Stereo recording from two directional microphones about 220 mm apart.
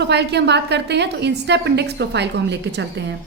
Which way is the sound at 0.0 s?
50° right (ahead or behind).